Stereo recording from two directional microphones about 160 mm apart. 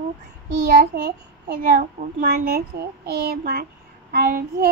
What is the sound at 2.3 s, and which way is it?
Child singing, 75° right (ahead or behind).